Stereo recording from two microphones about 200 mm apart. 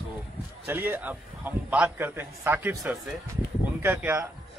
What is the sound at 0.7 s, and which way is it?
A man's voice, 10° right (ahead or behind).